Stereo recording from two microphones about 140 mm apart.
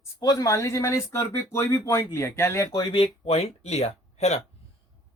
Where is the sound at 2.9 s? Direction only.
45° left (ahead or behind).